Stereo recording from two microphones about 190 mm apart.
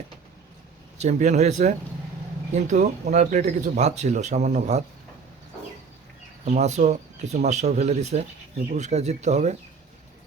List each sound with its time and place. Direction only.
1.0 s speech: 35° right (ahead or behind)
6.4 s speech: 35° right (ahead or behind)